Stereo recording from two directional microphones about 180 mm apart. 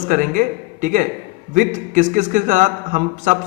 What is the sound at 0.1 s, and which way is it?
A man's voice, 45° right (ahead or behind).